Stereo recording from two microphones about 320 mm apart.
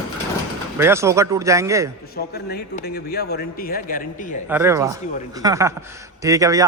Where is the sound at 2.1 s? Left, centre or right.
Left.